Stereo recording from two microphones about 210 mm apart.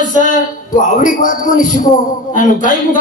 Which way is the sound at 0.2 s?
40° left (ahead or behind).